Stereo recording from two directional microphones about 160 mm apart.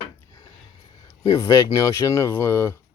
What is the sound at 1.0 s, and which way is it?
Speech, 20° left (ahead or behind).